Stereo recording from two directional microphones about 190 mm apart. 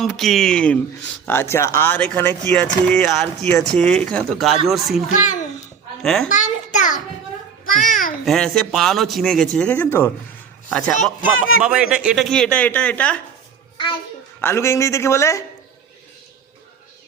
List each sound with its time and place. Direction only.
0.0 s speech: centre (ahead or behind)
5.2 s a child's voice: 40° left (ahead or behind)
6.0 s a child's voice: 5° left (ahead or behind)
6.2 s a child's voice: 40° left (ahead or behind)
8.2 s speech: centre (ahead or behind)
11.6 s speech: 5° right (ahead or behind)
14.4 s speech: 15° left (ahead or behind)